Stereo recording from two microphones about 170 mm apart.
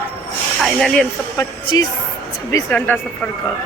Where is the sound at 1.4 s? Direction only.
20° left (ahead or behind).